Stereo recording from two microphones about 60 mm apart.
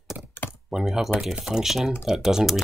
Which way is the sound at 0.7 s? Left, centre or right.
Centre.